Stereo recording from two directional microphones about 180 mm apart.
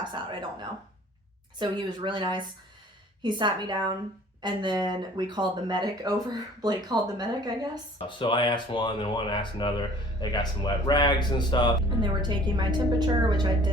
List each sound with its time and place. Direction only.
1.5 s speech: 25° right (ahead or behind)
8.0 s speech: 25° left (ahead or behind)
12.0 s speech: 25° right (ahead or behind)